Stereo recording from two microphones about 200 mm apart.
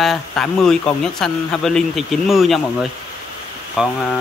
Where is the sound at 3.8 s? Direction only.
5° right (ahead or behind).